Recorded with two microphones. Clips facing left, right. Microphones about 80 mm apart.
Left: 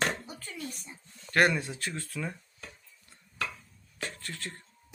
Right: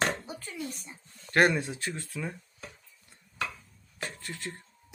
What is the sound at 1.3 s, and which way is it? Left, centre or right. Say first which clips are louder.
Speech: right 1 dB; right.